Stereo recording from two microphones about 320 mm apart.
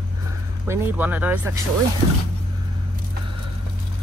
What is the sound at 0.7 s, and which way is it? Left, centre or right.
Speech, centre.